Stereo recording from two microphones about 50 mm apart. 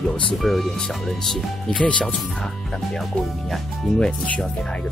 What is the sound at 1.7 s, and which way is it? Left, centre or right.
Speech, centre.